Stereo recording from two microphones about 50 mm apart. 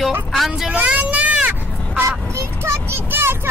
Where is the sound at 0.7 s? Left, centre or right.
Right.